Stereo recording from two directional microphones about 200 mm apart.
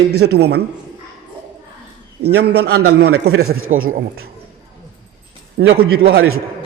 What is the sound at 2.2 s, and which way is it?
A man's voice, 55° right (ahead or behind).